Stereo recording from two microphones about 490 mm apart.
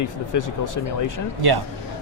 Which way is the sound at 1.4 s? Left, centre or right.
Right.